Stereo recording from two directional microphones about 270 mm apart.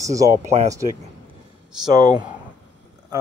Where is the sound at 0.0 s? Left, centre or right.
Centre.